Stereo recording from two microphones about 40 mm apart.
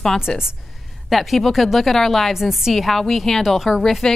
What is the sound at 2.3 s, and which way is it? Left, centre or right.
Speech, centre.